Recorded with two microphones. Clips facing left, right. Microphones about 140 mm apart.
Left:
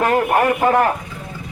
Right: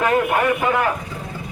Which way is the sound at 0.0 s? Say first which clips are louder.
Left 2 dB; 35° left (ahead or behind).